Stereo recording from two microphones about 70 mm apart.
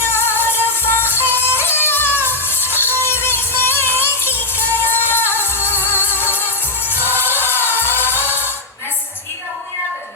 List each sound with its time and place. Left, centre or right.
0.0 s music: left